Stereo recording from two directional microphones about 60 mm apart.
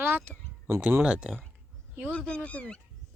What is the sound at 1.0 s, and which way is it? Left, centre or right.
Speech, centre.